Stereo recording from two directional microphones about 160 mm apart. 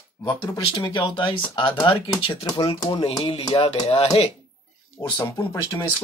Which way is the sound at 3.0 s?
40° left (ahead or behind).